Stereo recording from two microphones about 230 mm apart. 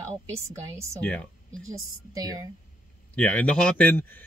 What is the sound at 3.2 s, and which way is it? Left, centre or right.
Speech, centre.